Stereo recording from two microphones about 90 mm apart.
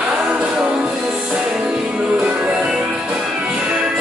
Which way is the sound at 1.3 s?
10° right (ahead or behind).